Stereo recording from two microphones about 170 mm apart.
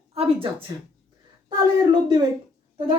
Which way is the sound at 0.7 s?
25° right (ahead or behind).